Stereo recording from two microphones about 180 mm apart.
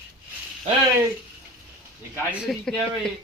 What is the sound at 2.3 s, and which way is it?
Speech, 5° right (ahead or behind).